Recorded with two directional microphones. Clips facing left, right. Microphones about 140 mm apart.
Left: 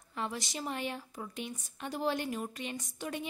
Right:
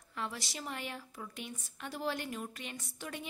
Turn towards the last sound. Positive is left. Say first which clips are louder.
# left 5 dB
turn(degrees=20)  # may be behind; listen again after turning